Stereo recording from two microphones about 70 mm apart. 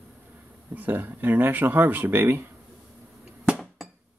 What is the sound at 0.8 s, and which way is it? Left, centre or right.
Speech, right.